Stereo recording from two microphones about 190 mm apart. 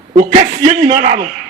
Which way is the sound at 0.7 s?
35° right (ahead or behind).